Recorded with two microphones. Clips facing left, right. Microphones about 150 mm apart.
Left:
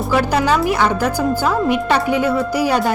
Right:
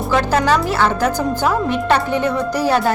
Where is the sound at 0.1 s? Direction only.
10° left (ahead or behind).